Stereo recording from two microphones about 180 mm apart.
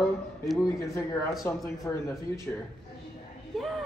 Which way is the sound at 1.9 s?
15° left (ahead or behind).